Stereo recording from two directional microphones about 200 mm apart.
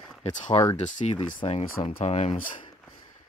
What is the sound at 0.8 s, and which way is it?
Speech, 35° left (ahead or behind).